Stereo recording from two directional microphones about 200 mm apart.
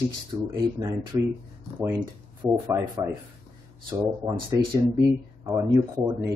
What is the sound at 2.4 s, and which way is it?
Speech, 20° right (ahead or behind).